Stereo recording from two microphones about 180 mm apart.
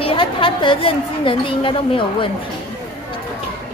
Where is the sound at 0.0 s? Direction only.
30° left (ahead or behind).